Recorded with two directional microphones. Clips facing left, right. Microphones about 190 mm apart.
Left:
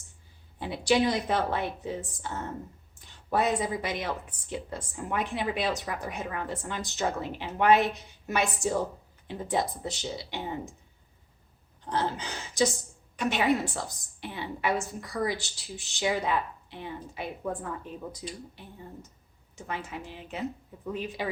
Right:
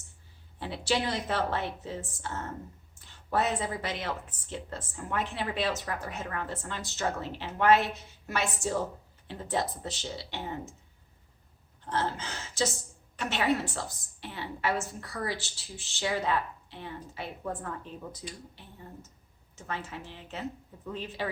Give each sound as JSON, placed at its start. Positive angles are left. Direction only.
{"t": 0.6, "sound": "a woman's voice", "side_deg": 15}
{"t": 11.9, "sound": "a woman's voice", "side_deg": 15}
{"t": 19.5, "sound": "a woman's voice", "side_deg": 15}